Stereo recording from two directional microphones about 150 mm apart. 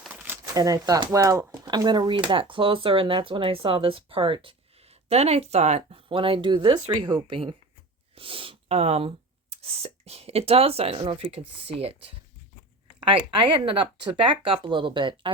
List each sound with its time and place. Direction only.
0.0 s shuffling cards: 10° right (ahead or behind)
0.5 s speech: 25° right (ahead or behind); by 6.0 s 45° right (ahead or behind)
6.1 s speech: 35° right (ahead or behind)